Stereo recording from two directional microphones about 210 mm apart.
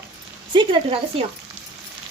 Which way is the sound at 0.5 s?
25° right (ahead or behind).